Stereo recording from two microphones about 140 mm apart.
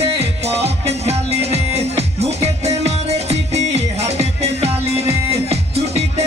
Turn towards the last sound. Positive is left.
turn(degrees=-50)  # may be behind; listen again after turning